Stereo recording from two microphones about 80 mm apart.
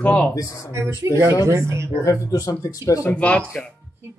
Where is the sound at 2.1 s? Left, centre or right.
Left.